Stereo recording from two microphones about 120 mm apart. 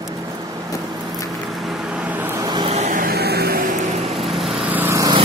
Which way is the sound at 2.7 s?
65° right (ahead or behind).